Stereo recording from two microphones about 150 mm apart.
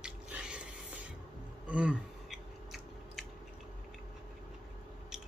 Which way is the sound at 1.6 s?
10° right (ahead or behind).